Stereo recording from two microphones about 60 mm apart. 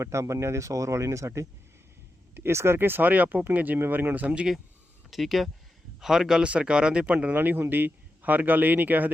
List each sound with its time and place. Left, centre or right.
0.0 s speech: right
2.3 s speech: right
5.1 s a man's voice: centre; by 7.3 s right
7.3 s speech: right